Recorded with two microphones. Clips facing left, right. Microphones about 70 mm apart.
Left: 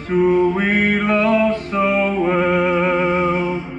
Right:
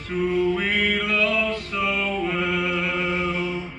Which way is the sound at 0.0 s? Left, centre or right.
Left.